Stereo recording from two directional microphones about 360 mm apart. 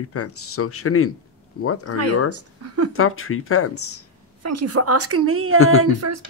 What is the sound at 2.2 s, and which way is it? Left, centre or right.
Speech, right.